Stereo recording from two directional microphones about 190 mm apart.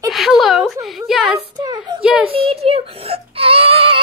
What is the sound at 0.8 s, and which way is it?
Speech, centre (ahead or behind).